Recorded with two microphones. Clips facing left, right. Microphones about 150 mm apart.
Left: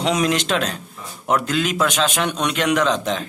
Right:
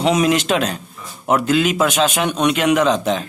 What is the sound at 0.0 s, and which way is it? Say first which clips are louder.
Speech: right 4 dB; 5° right (ahead or behind).